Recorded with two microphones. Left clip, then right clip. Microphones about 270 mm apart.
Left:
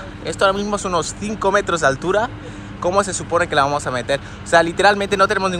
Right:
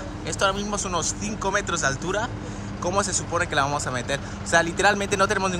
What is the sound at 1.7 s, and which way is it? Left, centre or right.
Speech, centre.